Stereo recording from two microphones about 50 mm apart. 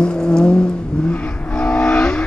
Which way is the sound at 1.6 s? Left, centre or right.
Centre.